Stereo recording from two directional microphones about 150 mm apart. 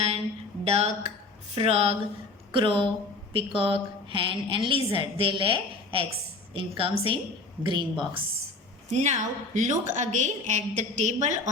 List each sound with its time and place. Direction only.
0.6 s a woman's voice: 45° right (ahead or behind)
8.9 s a woman's voice: 50° right (ahead or behind)